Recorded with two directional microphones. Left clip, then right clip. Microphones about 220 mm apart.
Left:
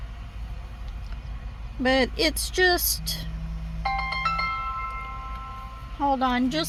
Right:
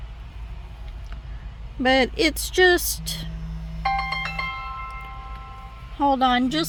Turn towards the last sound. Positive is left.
turn(degrees=-20)  # may be behind; listen again after turning